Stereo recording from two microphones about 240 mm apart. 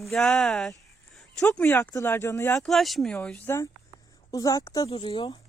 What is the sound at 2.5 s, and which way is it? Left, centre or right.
Speech, centre.